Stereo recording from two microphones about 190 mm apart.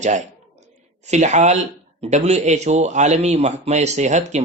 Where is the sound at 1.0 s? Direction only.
35° right (ahead or behind).